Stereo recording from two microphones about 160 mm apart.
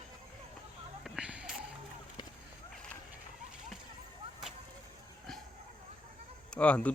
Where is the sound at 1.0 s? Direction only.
5° right (ahead or behind).